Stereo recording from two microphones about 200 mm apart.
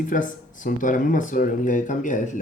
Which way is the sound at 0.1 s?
40° left (ahead or behind).